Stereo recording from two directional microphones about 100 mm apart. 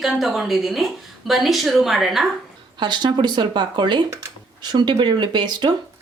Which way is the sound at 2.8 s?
50° right (ahead or behind).